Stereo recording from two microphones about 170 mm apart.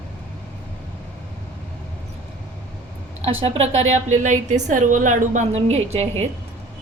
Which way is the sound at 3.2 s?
35° right (ahead or behind).